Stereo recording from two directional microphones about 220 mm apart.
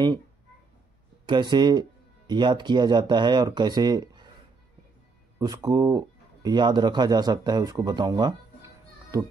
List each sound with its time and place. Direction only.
1.2 s speech: 20° right (ahead or behind)
5.4 s speech: 15° right (ahead or behind)